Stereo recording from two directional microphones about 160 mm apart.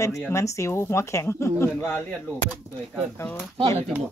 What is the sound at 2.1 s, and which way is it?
Speech, 5° left (ahead or behind).